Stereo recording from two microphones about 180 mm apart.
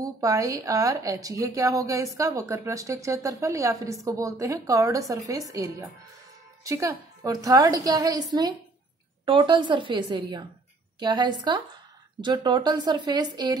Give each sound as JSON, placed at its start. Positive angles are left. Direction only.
{"t": 0.0, "sound": "a woman's voice", "side_deg": -20}